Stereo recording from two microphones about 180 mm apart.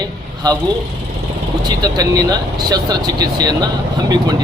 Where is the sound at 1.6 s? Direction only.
20° right (ahead or behind).